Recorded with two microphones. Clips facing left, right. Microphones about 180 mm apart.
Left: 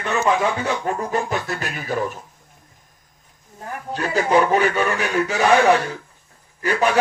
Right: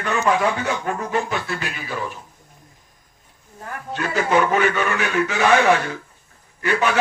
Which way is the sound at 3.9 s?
35° left (ahead or behind).